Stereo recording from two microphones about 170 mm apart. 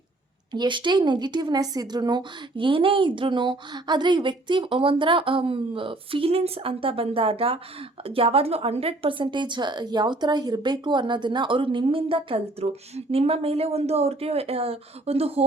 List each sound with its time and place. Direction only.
0.5 s a woman's voice: 25° right (ahead or behind)